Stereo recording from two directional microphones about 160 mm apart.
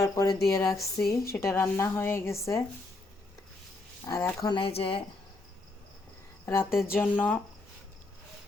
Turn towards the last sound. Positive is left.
turn(degrees=10)  # may be behind; listen again after turning